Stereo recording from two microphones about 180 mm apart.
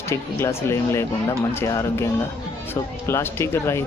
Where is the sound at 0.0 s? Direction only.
15° left (ahead or behind).